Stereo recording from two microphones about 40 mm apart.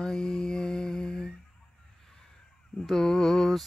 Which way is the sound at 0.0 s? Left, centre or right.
Centre.